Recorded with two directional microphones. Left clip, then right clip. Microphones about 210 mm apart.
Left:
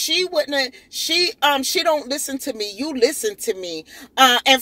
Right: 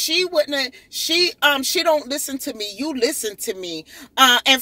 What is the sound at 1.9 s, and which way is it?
A man's voice, 10° right (ahead or behind).